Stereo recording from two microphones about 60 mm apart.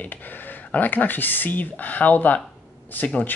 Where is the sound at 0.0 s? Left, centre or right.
Left.